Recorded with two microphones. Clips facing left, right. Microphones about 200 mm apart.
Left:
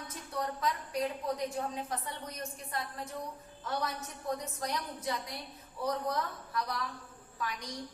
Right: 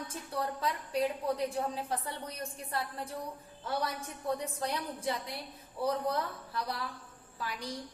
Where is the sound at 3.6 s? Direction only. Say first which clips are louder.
Right 1 dB; 30° right (ahead or behind).